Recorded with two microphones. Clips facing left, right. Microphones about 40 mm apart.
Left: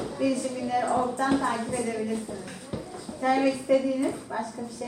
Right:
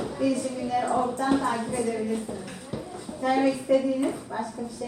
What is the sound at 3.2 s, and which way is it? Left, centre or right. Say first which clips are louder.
Speech: even; left.